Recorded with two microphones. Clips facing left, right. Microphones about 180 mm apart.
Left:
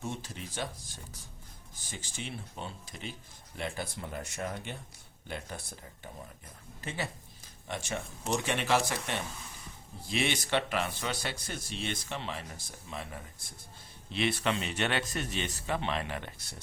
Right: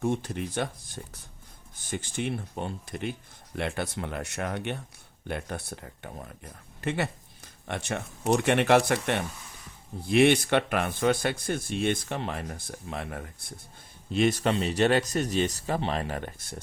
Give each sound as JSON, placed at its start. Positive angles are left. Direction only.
{"t": 0.0, "sound": "speech", "side_deg": -60}
{"t": 3.6, "sound": "speech", "side_deg": -70}
{"t": 14.1, "sound": "speech", "side_deg": -45}